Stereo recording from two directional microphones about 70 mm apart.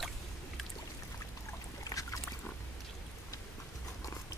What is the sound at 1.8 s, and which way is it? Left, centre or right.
Boat, left.